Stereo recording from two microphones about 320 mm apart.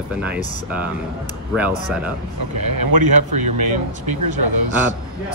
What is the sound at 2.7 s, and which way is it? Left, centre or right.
Speech, right.